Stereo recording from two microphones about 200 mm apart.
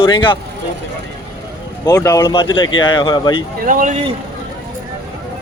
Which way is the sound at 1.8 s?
15° left (ahead or behind).